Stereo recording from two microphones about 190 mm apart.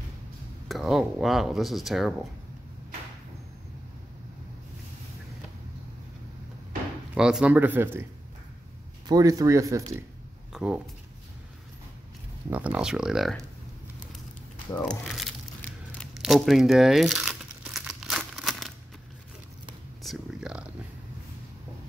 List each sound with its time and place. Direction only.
0.7 s speech: centre (ahead or behind)
7.2 s speech: 5° right (ahead or behind)
9.0 s speech: 20° right (ahead or behind)
10.5 s speech: 5° right (ahead or behind)
12.4 s speech: 10° right (ahead or behind)
14.8 s crumpling: centre (ahead or behind)
20.0 s a sound: centre (ahead or behind)